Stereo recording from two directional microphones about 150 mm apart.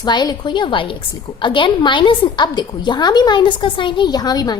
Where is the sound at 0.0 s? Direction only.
30° left (ahead or behind).